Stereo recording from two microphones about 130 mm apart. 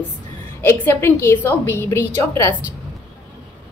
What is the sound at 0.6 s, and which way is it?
A woman's voice, 20° left (ahead or behind).